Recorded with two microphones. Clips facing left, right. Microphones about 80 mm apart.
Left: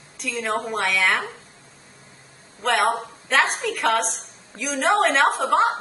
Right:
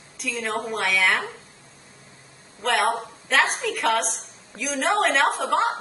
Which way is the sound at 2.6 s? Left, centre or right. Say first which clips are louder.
Left 2 dB; centre.